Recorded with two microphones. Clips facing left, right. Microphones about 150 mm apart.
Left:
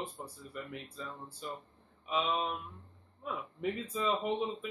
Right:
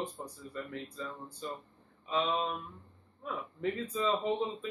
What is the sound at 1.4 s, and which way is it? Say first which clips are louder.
Speech: right 2 dB; 10° left (ahead or behind).